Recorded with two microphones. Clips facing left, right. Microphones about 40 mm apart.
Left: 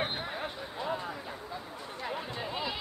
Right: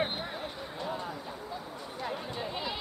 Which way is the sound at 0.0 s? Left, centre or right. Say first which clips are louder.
Right 1 dB; centre.